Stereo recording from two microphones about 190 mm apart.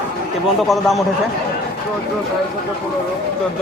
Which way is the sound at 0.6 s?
Centre (ahead or behind).